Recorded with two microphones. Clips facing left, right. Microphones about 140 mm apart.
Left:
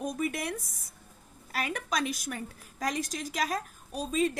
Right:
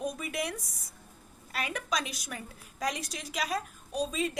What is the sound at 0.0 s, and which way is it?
Speech, 50° left (ahead or behind).